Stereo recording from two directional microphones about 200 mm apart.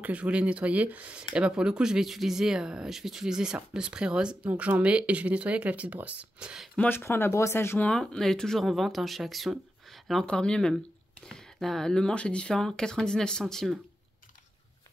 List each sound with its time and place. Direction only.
0.0 s speech: 5° right (ahead or behind)
6.8 s speech: 10° left (ahead or behind)